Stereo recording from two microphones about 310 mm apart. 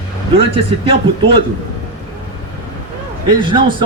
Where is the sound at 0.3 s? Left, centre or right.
Centre.